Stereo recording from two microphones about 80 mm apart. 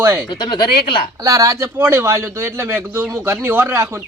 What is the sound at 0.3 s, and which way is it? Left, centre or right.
Speech, left.